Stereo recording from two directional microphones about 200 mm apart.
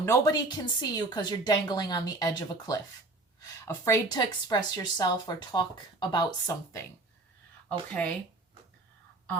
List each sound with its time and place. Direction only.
0.0 s speech: 15° left (ahead or behind)
7.7 s speech: 5° left (ahead or behind)